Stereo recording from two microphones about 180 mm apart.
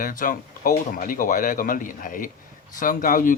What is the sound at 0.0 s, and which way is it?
Speech, 50° left (ahead or behind).